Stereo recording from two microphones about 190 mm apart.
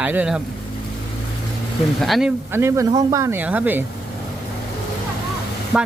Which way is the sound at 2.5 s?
15° right (ahead or behind).